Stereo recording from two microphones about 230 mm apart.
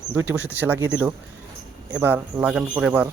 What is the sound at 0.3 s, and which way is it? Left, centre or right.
Speech, centre.